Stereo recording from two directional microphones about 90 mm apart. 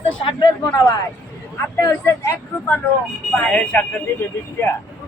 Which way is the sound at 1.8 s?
35° left (ahead or behind).